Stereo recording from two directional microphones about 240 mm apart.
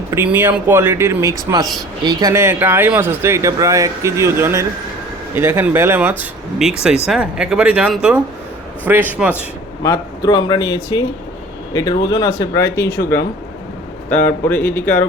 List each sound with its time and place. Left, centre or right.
0.1 s speech: centre
9.8 s speech: centre